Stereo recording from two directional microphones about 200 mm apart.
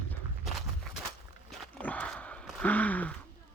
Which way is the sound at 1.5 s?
5° left (ahead or behind).